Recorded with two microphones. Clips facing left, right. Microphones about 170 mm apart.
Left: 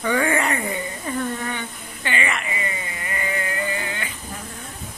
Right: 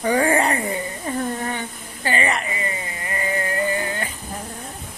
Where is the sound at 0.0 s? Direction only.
35° right (ahead or behind).